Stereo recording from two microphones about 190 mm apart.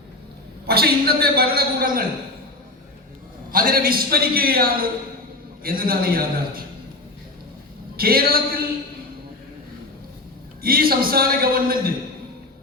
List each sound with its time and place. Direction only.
0.7 s a man's voice: 55° right (ahead or behind)
3.5 s a man's voice: 50° right (ahead or behind)
7.9 s a man's voice: 50° right (ahead or behind)
10.6 s a man's voice: 50° right (ahead or behind)